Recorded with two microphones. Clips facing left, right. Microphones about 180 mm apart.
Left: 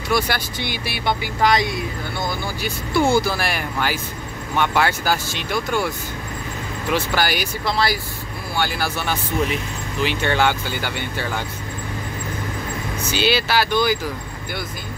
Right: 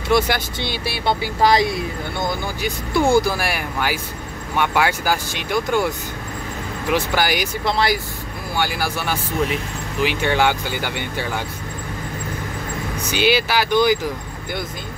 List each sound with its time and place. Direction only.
0.1 s speech: 25° right (ahead or behind)
13.1 s speech: 15° right (ahead or behind)